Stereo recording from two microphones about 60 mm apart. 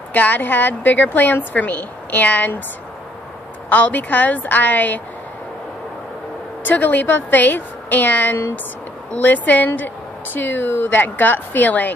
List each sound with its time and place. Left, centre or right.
0.1 s a woman's voice: left
3.6 s a woman's voice: left
6.6 s a woman's voice: left